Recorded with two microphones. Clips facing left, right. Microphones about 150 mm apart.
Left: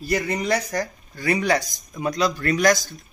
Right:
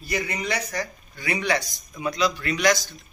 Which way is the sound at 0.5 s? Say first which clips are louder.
Left 5 dB; 45° left (ahead or behind).